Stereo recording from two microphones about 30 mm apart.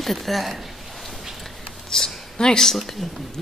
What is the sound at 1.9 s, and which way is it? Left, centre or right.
Speech, centre.